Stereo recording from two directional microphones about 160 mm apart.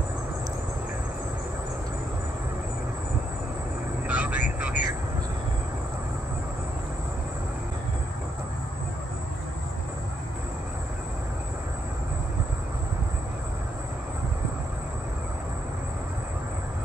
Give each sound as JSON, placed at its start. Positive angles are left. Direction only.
{"t": 4.1, "sound": "vehicle", "side_deg": -10}